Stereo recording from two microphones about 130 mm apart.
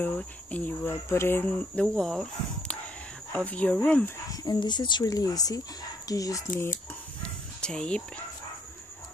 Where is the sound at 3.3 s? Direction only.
10° left (ahead or behind).